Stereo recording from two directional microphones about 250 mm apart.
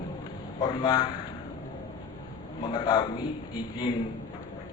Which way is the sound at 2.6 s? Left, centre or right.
Centre.